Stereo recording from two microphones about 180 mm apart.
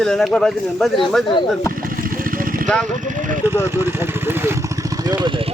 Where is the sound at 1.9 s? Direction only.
50° right (ahead or behind).